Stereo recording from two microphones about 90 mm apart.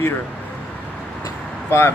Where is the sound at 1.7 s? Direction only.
30° left (ahead or behind).